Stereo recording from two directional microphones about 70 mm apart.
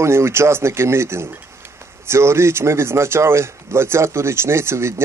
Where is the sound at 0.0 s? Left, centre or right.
Right.